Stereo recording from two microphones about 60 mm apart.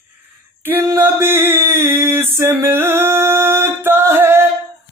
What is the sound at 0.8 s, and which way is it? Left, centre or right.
Mantra, right.